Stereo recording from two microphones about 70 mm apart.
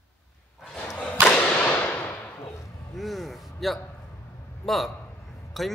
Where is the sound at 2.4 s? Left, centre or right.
Left.